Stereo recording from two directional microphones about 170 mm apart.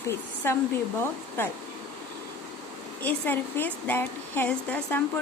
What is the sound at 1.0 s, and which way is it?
Speech, 10° left (ahead or behind).